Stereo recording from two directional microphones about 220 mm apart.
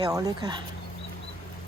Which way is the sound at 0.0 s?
15° right (ahead or behind).